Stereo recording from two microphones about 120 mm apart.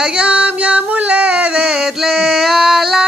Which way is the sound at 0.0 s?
10° right (ahead or behind).